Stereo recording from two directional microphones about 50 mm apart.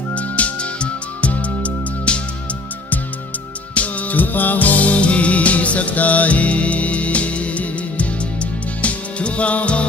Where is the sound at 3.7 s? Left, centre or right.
Left.